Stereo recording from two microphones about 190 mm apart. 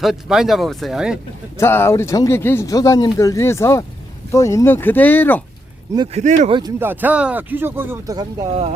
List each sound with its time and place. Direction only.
0.0 s speech: centre (ahead or behind)
1.5 s speech: 10° left (ahead or behind)
6.1 s speech: 35° right (ahead or behind)
6.6 s speech: 15° right (ahead or behind)